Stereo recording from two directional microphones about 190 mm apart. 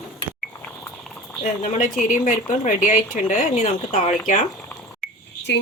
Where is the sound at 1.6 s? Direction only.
40° left (ahead or behind).